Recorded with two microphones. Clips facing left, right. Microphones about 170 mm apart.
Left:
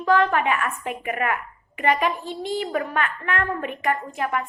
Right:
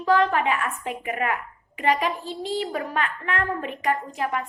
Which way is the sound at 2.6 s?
60° left (ahead or behind).